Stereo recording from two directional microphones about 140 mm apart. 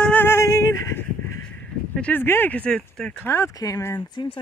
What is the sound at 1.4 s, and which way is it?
Speech, 10° left (ahead or behind).